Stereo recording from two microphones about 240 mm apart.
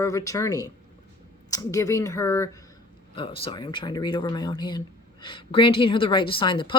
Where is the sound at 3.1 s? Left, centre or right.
Left.